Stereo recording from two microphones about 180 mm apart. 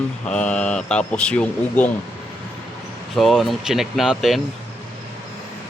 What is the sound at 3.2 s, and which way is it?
Speech, centre (ahead or behind).